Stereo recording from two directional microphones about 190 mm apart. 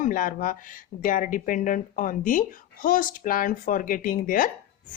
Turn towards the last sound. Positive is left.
turn(degrees=45)  # may be behind; listen again after turning